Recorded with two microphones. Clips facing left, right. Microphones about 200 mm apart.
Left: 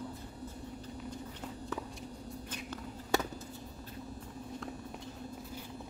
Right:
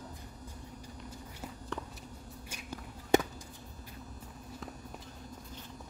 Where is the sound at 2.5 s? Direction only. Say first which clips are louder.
Right 1 dB; 10° right (ahead or behind).